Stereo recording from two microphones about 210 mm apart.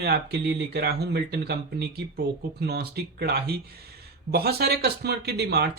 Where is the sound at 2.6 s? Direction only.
50° right (ahead or behind).